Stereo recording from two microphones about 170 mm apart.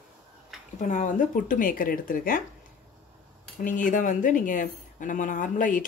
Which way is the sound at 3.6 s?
50° left (ahead or behind).